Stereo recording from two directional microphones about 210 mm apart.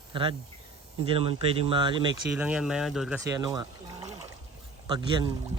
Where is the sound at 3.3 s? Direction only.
15° right (ahead or behind).